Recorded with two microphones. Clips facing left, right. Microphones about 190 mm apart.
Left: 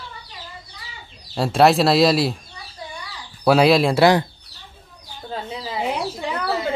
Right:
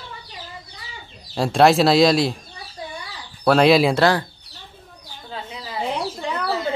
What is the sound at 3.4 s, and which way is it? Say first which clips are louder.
Speech: even; 5° left (ahead or behind).